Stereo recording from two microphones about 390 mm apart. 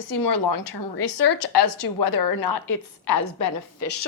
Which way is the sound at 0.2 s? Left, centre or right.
Left.